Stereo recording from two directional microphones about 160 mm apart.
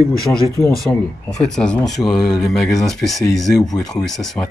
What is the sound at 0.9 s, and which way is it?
Speech, centre (ahead or behind).